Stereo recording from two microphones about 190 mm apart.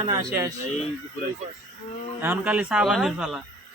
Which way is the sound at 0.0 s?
15° right (ahead or behind).